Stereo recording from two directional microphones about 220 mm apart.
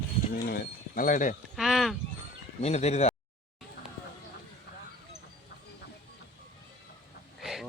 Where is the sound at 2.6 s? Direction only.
30° left (ahead or behind).